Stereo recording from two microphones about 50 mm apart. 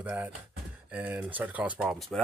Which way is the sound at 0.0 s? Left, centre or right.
Right.